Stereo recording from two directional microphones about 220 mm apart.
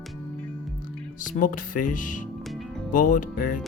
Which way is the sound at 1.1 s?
35° left (ahead or behind).